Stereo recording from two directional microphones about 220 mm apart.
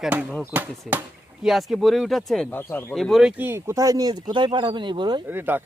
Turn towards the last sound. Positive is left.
turn(degrees=-10)  # may be behind; listen again after turning